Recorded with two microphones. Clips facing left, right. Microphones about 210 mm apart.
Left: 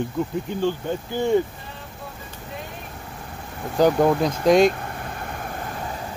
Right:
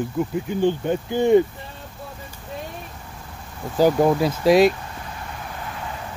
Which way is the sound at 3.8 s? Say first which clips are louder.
Right 1 dB; 5° right (ahead or behind).